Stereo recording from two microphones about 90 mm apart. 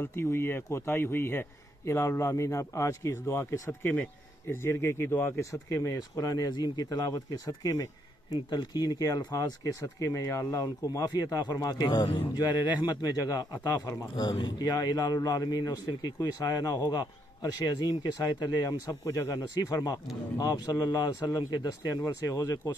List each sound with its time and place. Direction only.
0.0 s speech: 25° left (ahead or behind)
8.5 s speech: 50° left (ahead or behind)
14.1 s speech: 55° left (ahead or behind)
14.6 s speech: 45° left (ahead or behind)